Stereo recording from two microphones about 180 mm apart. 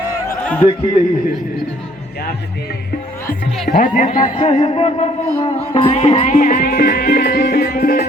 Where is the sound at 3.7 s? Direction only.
50° left (ahead or behind); by 5.1 s 35° left (ahead or behind).